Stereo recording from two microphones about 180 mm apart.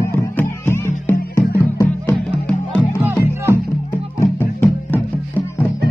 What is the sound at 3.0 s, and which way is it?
Music, 15° right (ahead or behind).